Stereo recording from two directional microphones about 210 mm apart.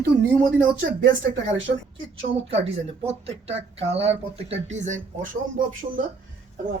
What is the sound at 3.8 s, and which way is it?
Speech, 30° right (ahead or behind).